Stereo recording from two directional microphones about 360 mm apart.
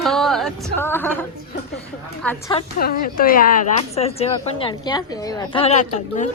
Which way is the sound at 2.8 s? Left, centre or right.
Left.